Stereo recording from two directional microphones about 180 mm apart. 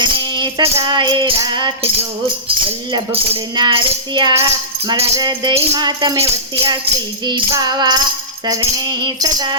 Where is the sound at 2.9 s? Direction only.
30° right (ahead or behind).